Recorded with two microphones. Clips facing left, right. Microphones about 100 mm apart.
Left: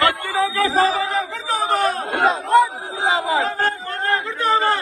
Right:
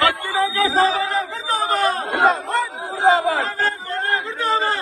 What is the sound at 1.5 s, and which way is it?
Chatter, 40° right (ahead or behind).